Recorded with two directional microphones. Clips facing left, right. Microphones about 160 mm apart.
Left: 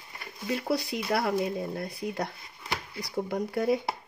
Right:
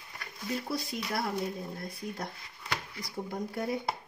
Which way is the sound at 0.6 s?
70° left (ahead or behind).